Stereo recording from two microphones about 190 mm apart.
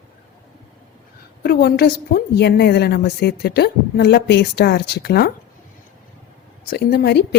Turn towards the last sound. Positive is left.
turn(degrees=60)  # may be behind; listen again after turning